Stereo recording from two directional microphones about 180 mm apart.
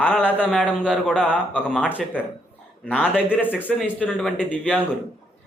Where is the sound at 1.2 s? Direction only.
10° left (ahead or behind).